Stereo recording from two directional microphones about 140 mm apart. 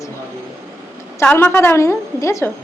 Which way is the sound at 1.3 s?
15° left (ahead or behind).